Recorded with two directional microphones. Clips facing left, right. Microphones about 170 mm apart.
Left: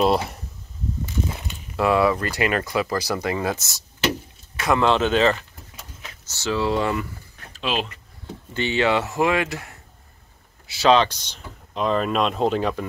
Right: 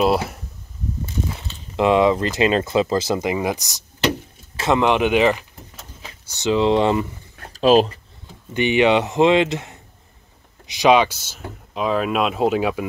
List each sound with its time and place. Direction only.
0.0 s speech: 5° right (ahead or behind)
1.8 s speech: 20° right (ahead or behind)
7.5 s speech: 40° right (ahead or behind)
8.5 s speech: 15° right (ahead or behind)